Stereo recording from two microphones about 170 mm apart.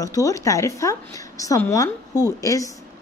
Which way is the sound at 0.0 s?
20° left (ahead or behind).